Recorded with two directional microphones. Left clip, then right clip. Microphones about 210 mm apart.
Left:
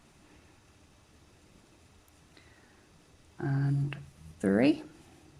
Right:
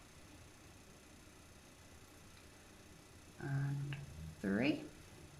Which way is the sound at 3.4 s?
30° left (ahead or behind).